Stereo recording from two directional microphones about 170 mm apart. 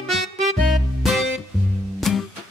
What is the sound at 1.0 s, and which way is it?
Music, centre (ahead or behind).